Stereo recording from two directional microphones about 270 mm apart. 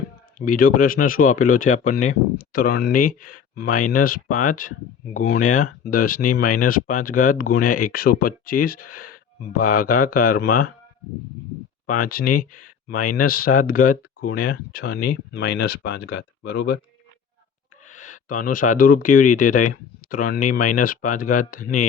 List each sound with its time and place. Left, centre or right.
0.3 s speech: left
11.9 s speech: left
15.4 s speech: left
17.8 s speech: left